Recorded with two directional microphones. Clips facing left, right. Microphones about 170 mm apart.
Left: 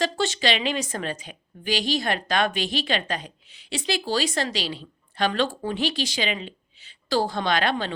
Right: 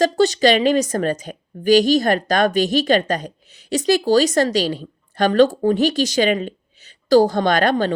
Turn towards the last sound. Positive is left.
turn(degrees=-45)  # may be behind; listen again after turning